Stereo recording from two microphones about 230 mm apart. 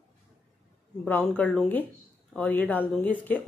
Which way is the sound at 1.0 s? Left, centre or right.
Centre.